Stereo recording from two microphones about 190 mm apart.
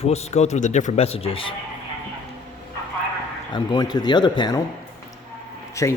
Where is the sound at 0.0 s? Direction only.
35° left (ahead or behind).